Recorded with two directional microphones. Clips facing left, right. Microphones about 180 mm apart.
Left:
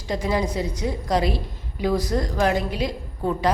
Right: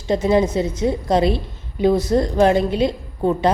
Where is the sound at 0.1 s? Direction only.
25° right (ahead or behind).